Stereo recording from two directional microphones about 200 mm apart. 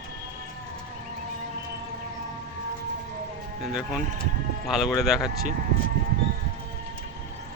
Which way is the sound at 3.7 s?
5° right (ahead or behind).